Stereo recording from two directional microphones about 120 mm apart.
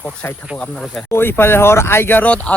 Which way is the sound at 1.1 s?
20° left (ahead or behind).